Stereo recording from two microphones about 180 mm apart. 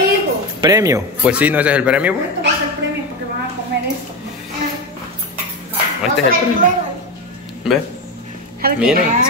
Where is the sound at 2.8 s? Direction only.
90° right.